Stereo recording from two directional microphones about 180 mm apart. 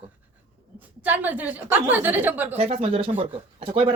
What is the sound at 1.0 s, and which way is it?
A woman's voice, 10° right (ahead or behind).